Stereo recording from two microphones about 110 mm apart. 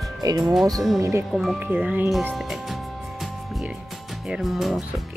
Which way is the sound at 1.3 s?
Centre (ahead or behind).